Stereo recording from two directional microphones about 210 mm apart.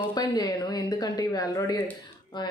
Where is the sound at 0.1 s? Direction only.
20° left (ahead or behind).